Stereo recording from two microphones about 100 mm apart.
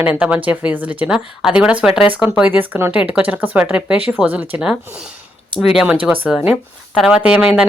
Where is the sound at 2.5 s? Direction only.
20° right (ahead or behind).